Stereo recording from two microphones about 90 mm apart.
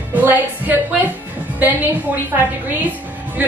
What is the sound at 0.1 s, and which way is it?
A woman's voice, 20° right (ahead or behind).